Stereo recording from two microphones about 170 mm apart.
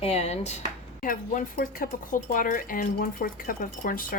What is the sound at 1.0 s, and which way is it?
Speech, 55° left (ahead or behind).